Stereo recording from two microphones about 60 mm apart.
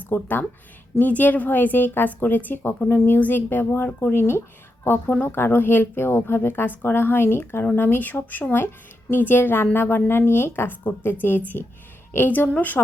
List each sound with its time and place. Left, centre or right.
0.0 s speech: left